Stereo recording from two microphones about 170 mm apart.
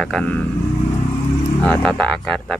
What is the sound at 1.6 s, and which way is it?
Speech, 5° left (ahead or behind).